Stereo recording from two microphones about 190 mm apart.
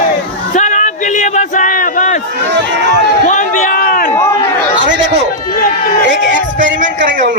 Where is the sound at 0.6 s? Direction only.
40° left (ahead or behind).